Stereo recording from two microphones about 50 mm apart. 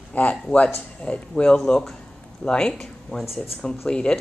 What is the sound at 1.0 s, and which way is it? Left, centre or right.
Speech, left.